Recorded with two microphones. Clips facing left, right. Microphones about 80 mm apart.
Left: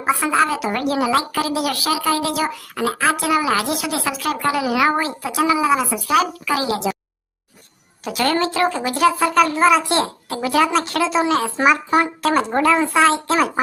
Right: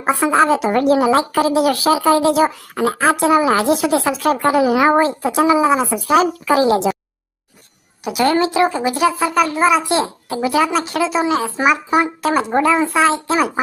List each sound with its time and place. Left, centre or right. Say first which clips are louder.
0.0 s speech: right 3 dB; right
8.0 s a child's voice: right 4 dB; centre